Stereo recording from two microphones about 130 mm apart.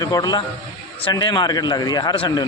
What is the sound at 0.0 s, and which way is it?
A man's voice, 30° left (ahead or behind).